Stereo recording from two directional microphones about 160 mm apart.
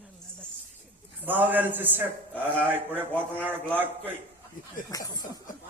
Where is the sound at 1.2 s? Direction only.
10° right (ahead or behind).